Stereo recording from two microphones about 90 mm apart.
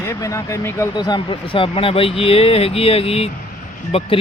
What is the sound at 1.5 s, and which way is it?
Speech, 85° left.